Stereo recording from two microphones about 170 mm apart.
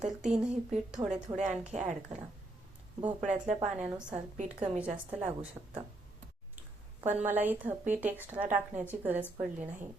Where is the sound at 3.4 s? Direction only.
10° right (ahead or behind).